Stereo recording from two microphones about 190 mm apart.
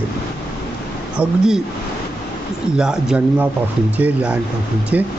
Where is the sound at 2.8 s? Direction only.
5° right (ahead or behind).